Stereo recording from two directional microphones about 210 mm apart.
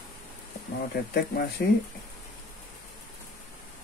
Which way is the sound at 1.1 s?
45° left (ahead or behind).